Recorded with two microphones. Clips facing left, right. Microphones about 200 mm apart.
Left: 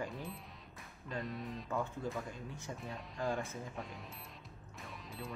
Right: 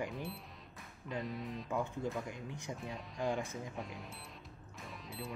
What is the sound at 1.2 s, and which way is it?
Speech, centre (ahead or behind).